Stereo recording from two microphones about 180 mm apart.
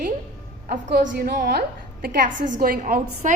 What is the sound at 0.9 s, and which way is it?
A woman's voice, 55° right (ahead or behind).